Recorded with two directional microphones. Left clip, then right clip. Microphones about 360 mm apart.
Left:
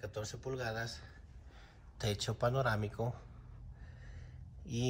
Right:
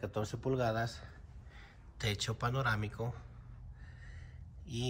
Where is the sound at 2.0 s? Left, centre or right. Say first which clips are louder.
Left 1 dB; centre.